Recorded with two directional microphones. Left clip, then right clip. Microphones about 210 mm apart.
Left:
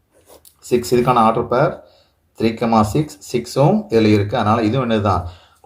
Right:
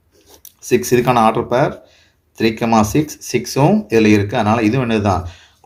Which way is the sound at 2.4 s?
35° right (ahead or behind).